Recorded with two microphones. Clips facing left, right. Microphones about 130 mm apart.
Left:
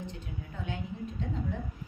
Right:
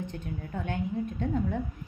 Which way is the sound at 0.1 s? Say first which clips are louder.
Right 6 dB; 55° right (ahead or behind).